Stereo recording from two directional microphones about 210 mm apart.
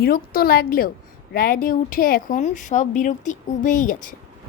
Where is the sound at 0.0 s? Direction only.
45° left (ahead or behind).